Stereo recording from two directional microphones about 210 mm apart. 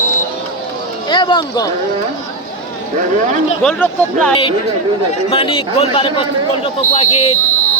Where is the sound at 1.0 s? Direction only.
20° left (ahead or behind).